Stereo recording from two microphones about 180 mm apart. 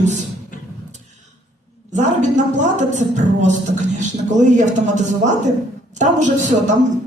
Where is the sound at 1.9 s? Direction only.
40° right (ahead or behind).